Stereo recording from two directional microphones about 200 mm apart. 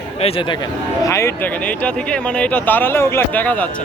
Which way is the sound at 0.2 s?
30° left (ahead or behind).